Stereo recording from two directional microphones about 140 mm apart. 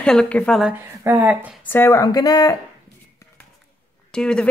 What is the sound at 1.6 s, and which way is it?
Speech, 15° left (ahead or behind).